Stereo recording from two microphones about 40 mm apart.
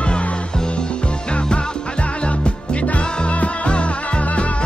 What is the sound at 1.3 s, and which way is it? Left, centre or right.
Music, left.